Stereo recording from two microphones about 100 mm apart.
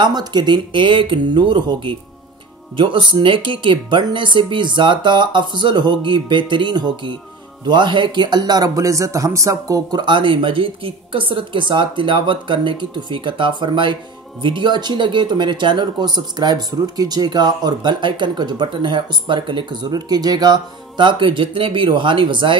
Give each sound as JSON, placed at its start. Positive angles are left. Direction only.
{"t": 0.0, "sound": "speech", "side_deg": -45}